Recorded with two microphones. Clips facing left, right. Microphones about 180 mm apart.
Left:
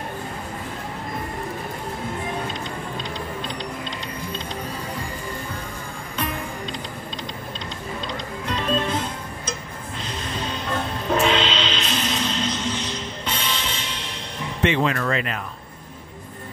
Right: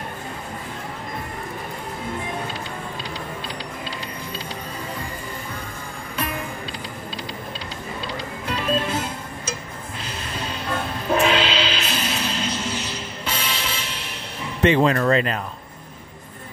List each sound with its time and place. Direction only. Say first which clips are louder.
8.1 s music: even; 10° right (ahead or behind)
14.6 s speech: right 4 dB; 35° right (ahead or behind)